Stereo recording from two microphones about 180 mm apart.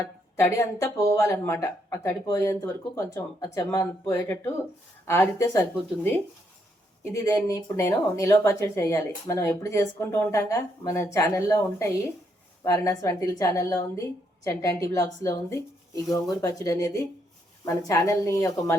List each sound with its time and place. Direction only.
0.3 s speech: 15° left (ahead or behind)